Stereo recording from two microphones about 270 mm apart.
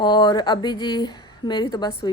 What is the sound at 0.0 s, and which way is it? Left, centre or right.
A woman's voice, centre.